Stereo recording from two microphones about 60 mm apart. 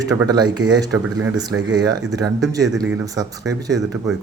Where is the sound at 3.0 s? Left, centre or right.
Right.